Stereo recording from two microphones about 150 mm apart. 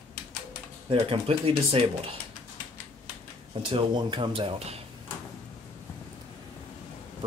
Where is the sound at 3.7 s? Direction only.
30° right (ahead or behind).